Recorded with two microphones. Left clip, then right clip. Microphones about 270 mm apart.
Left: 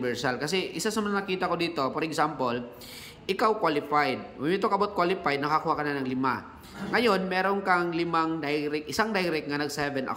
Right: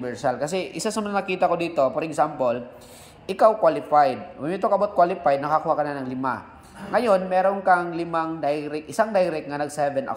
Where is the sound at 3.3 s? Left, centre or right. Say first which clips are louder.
Right 7 dB; centre.